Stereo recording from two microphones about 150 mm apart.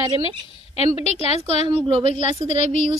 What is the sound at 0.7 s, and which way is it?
A woman's voice, 45° left (ahead or behind).